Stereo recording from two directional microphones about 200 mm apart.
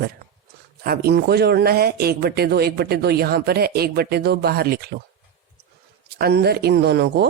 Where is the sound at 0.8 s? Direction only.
50° right (ahead or behind).